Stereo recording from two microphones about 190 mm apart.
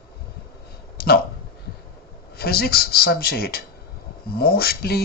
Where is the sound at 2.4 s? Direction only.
55° left (ahead or behind).